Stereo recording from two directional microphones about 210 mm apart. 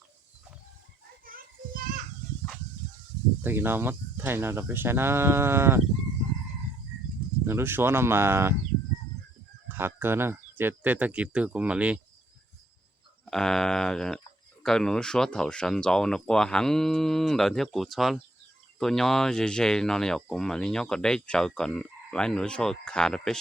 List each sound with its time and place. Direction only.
1.2 s children playing: 45° right (ahead or behind)
3.4 s speech: 10° right (ahead or behind)
7.4 s speech: 10° right (ahead or behind)
9.6 s speech: 10° right (ahead or behind)
13.2 s speech: centre (ahead or behind)